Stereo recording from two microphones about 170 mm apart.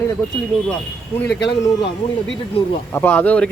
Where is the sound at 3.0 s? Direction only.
10° left (ahead or behind).